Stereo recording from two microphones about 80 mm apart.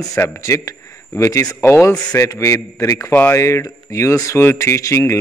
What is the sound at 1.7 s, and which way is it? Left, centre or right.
Speech, left.